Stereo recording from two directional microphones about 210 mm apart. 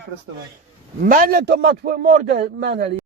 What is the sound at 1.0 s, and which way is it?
A man's voice, 40° right (ahead or behind).